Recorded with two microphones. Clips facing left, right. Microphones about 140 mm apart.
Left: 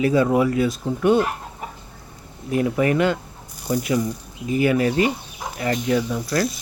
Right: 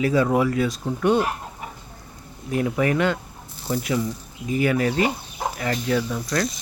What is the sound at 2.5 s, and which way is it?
Speech, 35° left (ahead or behind).